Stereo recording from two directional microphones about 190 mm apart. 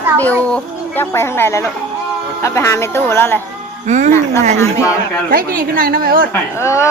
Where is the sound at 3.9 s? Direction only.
40° right (ahead or behind).